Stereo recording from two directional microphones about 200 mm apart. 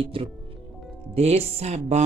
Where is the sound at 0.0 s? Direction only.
25° right (ahead or behind).